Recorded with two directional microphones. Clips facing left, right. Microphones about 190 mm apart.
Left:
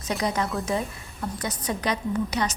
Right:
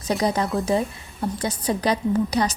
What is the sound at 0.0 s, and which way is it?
A woman's voice, 35° right (ahead or behind).